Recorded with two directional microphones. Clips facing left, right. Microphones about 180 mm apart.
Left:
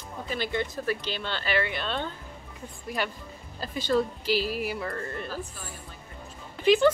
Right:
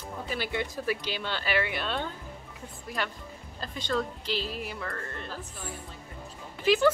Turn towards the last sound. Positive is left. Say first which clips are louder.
# left 3 dB
turn(degrees=-5)  # may be behind; listen again after turning